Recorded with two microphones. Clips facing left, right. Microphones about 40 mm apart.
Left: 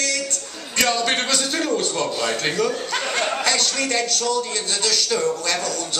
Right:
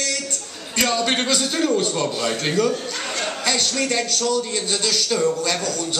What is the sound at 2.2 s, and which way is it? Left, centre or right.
Speech, centre.